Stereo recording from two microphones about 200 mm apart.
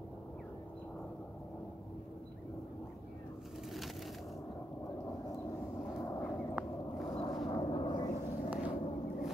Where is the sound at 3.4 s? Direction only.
Centre (ahead or behind).